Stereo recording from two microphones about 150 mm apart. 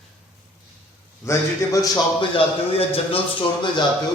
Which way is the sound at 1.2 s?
20° left (ahead or behind).